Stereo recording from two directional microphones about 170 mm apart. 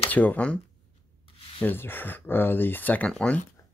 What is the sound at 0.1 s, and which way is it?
Speech, 10° left (ahead or behind).